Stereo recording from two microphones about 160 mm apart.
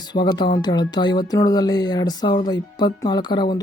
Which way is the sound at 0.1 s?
25° left (ahead or behind).